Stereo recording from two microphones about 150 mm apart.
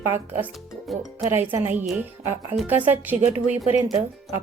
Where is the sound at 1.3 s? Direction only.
15° right (ahead or behind).